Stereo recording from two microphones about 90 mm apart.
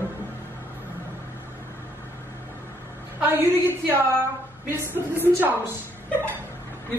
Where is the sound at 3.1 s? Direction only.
20° right (ahead or behind).